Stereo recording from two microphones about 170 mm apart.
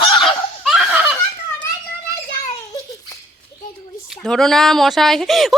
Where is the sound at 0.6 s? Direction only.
Centre (ahead or behind).